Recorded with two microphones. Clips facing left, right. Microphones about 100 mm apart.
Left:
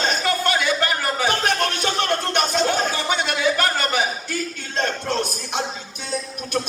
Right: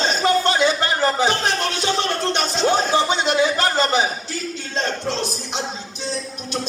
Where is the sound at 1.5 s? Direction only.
50° left (ahead or behind).